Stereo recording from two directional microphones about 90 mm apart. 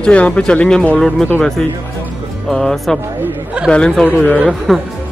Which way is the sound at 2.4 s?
5° left (ahead or behind).